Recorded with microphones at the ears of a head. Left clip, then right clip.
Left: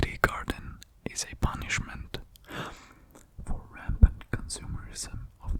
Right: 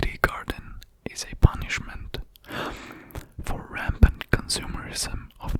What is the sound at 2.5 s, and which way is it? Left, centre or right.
Whispering, right.